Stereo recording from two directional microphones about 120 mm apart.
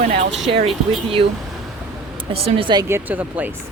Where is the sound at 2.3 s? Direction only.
45° right (ahead or behind).